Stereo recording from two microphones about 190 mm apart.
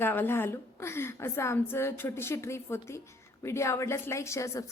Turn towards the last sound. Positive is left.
turn(degrees=15)  # may be behind; listen again after turning